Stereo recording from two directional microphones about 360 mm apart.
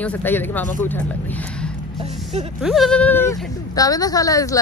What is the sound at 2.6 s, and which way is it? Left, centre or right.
Speech, centre.